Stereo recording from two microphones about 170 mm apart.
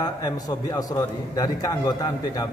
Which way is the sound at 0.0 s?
20° left (ahead or behind).